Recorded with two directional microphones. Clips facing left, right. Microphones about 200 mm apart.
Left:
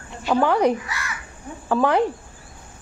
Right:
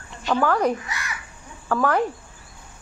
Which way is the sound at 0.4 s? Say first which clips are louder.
Left 3 dB; 15° left (ahead or behind).